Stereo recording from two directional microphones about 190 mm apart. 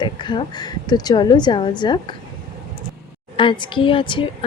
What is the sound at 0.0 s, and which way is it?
A woman's voice, 25° left (ahead or behind).